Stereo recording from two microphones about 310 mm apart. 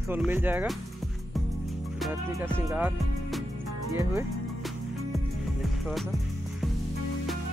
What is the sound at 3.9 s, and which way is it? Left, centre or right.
Speech, centre.